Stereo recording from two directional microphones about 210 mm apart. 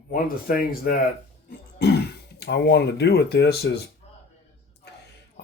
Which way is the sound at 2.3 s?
55° left (ahead or behind).